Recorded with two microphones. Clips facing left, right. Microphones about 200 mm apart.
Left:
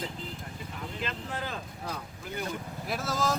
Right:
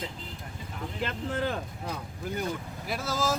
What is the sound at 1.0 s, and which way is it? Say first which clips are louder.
Speech: right 7 dB; 60° right (ahead or behind).